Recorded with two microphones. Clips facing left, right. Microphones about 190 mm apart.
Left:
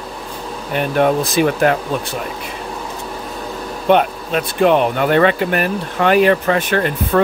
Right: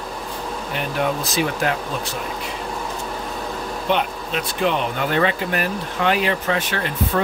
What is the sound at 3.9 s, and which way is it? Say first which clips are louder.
Speech: left 8 dB; 50° left (ahead or behind).